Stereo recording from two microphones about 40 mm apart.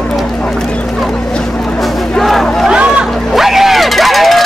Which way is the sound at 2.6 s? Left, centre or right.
Right.